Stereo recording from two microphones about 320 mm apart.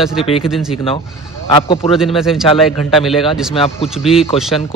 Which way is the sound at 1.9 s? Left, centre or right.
Centre.